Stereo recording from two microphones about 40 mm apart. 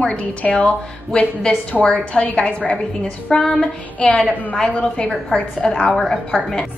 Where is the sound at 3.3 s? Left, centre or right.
Centre.